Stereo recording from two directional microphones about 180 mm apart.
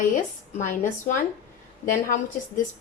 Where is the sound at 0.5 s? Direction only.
45° left (ahead or behind).